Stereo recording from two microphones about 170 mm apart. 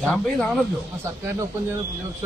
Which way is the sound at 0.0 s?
Centre (ahead or behind).